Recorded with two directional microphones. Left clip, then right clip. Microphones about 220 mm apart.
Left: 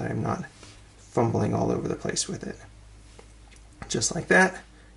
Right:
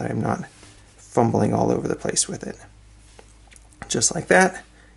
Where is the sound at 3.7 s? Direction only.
15° right (ahead or behind).